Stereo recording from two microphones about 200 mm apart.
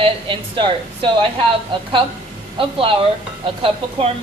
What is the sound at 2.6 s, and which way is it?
A woman's voice, 25° right (ahead or behind).